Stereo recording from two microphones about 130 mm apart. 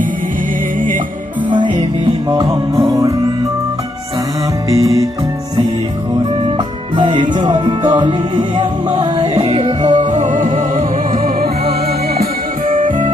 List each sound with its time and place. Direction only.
0.8 s music: 90° right
1.5 s music: 40° right (ahead or behind)
2.3 s music: 25° right (ahead or behind)
4.7 s music: 25° right (ahead or behind)
6.6 s music: 35° right (ahead or behind)
9.4 s music: 50° right (ahead or behind)
9.8 s music: 75° right (ahead or behind)